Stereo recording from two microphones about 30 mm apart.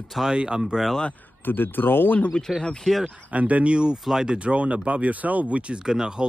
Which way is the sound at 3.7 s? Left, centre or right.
Right.